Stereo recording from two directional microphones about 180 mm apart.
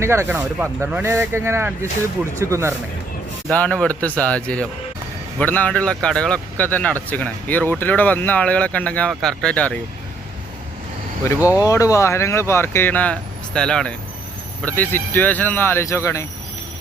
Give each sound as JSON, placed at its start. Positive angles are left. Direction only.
{"t": 0.0, "sound": "speech", "side_deg": -15}
{"t": 3.5, "sound": "speech", "side_deg": 5}
{"t": 11.3, "sound": "speech", "side_deg": -10}
{"t": 11.6, "sound": "speech", "side_deg": 20}